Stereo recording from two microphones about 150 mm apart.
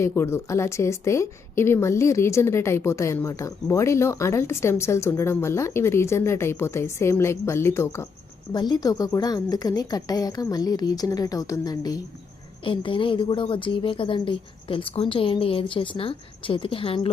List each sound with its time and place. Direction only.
0.0 s a woman's voice: 15° left (ahead or behind)
8.5 s a woman's voice: 30° left (ahead or behind)